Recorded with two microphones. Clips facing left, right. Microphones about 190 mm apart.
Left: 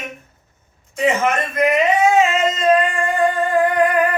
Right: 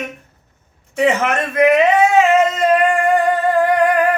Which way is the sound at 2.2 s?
65° right (ahead or behind).